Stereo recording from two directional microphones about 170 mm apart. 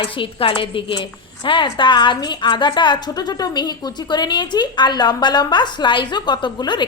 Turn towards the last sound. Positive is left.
turn(degrees=25)  # may be behind; listen again after turning